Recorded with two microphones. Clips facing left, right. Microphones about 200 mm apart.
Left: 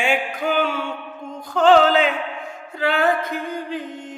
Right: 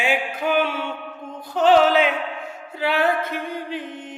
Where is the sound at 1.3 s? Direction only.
45° left (ahead or behind).